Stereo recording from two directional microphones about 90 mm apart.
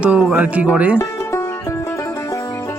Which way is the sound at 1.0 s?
35° left (ahead or behind).